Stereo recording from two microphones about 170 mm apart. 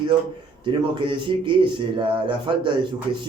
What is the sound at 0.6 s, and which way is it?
Speech, 30° right (ahead or behind).